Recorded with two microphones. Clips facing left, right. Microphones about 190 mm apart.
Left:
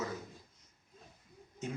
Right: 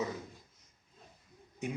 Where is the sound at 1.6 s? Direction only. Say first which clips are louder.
Right 3 dB; 15° right (ahead or behind).